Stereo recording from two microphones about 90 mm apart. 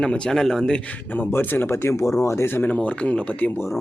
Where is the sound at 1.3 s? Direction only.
25° left (ahead or behind).